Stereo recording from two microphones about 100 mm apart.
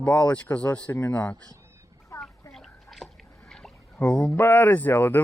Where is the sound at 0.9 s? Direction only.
20° left (ahead or behind).